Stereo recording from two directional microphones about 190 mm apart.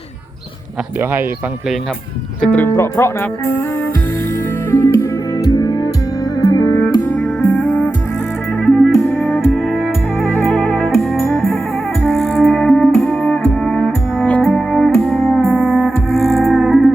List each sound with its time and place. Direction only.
2.4 s speech: 5° left (ahead or behind)
4.7 s music: 15° left (ahead or behind); by 16.9 s centre (ahead or behind)